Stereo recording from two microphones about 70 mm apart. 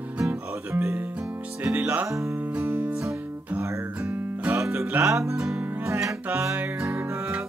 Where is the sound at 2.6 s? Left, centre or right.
Right.